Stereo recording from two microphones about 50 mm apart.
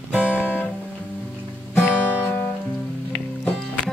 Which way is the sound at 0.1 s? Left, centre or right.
Left.